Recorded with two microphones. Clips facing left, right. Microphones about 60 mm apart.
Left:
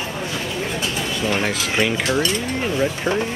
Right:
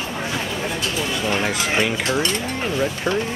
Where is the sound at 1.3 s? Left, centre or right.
Centre.